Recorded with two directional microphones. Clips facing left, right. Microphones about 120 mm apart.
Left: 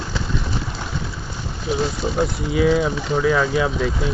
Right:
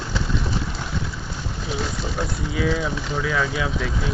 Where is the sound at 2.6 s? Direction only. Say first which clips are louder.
Left 6 dB; 20° left (ahead or behind).